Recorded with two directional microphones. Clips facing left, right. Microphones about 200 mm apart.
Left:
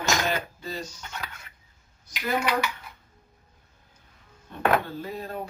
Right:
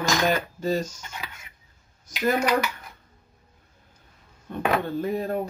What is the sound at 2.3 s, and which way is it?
Speech, 40° right (ahead or behind).